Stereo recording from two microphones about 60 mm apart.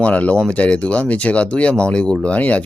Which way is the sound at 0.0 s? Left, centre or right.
Left.